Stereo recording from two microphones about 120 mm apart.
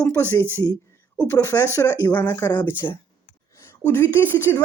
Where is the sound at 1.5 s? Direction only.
30° left (ahead or behind).